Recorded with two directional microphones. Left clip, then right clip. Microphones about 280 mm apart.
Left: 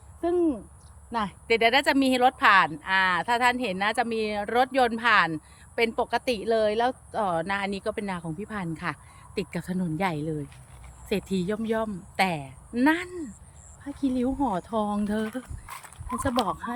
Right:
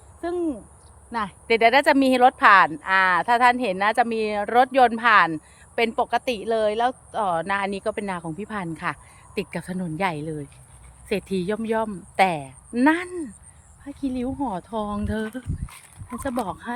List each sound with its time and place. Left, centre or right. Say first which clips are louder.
0.2 s speech: left 2 dB; centre
15.3 s speech: even; centre
16.5 s speech: left 1 dB; centre